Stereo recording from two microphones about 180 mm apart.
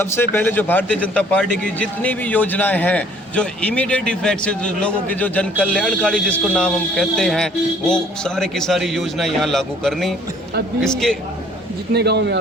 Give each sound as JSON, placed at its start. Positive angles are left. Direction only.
{"t": 0.0, "sound": "a man's voice", "side_deg": 15}
{"t": 11.9, "sound": "speech", "side_deg": -70}